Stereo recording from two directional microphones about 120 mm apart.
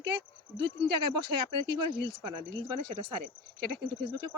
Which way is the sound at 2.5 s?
40° right (ahead or behind).